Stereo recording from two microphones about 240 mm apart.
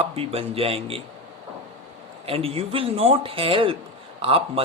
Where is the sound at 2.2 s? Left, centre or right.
Right.